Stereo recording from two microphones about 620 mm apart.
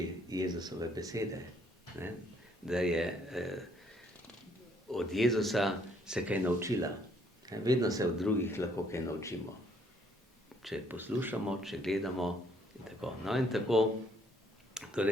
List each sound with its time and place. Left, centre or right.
0.3 s speech: centre
2.6 s speech: centre
4.9 s speech: centre
10.6 s speech: centre
14.7 s a sound: centre